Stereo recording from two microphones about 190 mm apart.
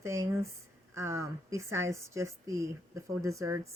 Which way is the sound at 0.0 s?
15° right (ahead or behind).